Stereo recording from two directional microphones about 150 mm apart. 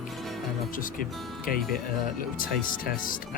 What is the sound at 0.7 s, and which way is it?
Speech, 65° left (ahead or behind).